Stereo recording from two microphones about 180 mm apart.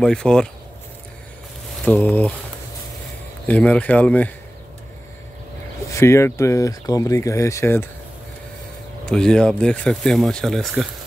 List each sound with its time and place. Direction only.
0.0 s speech: 5° left (ahead or behind)
1.9 s speech: 10° left (ahead or behind)
3.4 s speech: 5° left (ahead or behind)
5.9 s speech: 15° left (ahead or behind)
9.0 s speech: 5° left (ahead or behind)